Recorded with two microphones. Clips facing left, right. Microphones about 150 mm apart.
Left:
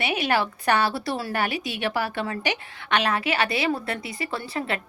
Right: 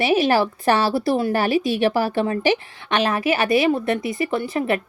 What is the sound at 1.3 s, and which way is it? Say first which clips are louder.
Speech: right 8 dB; 40° right (ahead or behind).